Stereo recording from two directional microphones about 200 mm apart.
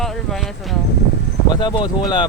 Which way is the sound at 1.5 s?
20° left (ahead or behind).